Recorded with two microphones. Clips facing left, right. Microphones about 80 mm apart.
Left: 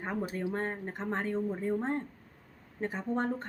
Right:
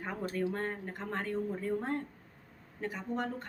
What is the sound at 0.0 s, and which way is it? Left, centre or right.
Speech, left.